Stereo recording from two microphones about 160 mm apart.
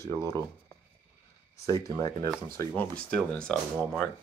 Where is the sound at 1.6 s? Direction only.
20° left (ahead or behind).